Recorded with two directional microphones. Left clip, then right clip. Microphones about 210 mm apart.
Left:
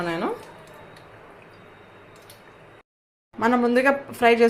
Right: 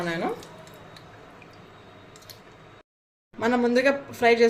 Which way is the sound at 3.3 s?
5° left (ahead or behind).